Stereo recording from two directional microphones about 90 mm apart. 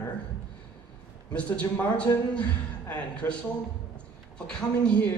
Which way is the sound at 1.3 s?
15° left (ahead or behind).